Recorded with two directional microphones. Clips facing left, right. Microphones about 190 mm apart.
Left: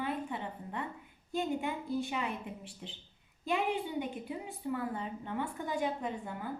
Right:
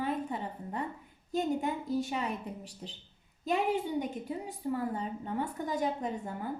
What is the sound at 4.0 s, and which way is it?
A woman's voice, 40° right (ahead or behind).